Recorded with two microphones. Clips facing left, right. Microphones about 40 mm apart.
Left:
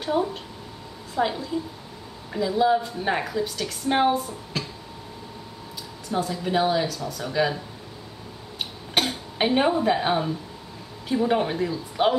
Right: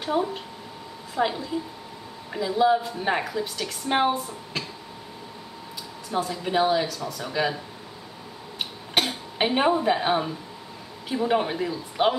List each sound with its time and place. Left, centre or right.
0.0 s a woman's voice: centre
6.0 s a woman's voice: centre
8.5 s a sound: centre
11.1 s a woman's voice: centre